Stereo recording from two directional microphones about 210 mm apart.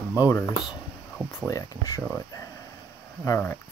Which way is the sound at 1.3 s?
15° left (ahead or behind).